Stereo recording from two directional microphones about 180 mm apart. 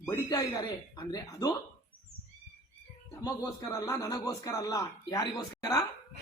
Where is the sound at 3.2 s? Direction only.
20° left (ahead or behind).